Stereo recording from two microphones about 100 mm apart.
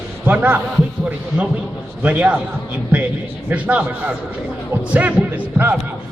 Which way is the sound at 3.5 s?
15° right (ahead or behind).